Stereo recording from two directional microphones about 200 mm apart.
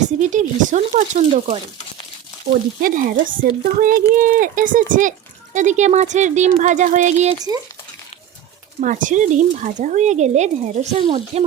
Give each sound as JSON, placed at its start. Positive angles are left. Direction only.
{"t": 0.0, "sound": "speech", "side_deg": -40}
{"t": 2.8, "sound": "speech", "side_deg": -40}
{"t": 8.8, "sound": "speech", "side_deg": -40}